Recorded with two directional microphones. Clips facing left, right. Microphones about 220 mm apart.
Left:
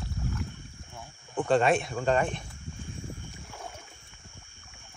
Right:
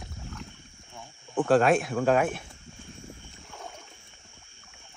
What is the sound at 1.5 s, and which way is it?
Speech, centre (ahead or behind).